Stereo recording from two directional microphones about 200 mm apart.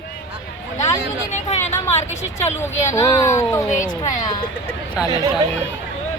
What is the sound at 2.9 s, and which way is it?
Speech, 15° left (ahead or behind).